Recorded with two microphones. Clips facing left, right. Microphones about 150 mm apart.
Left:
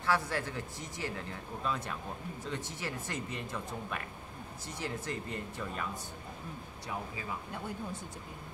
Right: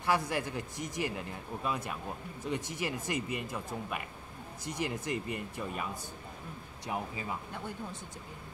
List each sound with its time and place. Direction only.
0.0 s a man's voice: 15° right (ahead or behind)
6.9 s speech: 20° right (ahead or behind)